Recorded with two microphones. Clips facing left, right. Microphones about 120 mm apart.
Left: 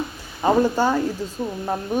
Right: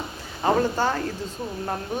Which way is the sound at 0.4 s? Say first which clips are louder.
Left 4 dB; 15° left (ahead or behind).